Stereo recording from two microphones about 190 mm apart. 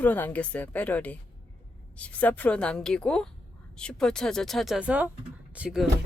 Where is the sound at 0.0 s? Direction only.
10° left (ahead or behind).